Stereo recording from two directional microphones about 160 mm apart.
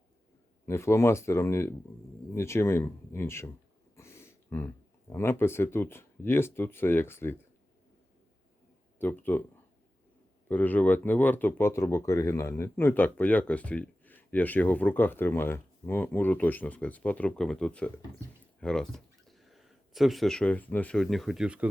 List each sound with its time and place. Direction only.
0.6 s speech: 15° left (ahead or behind)
9.0 s speech: 10° left (ahead or behind)
10.5 s speech: 10° left (ahead or behind); by 21.7 s 5° right (ahead or behind)